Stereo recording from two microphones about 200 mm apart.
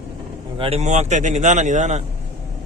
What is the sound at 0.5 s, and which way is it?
Speech, 30° right (ahead or behind).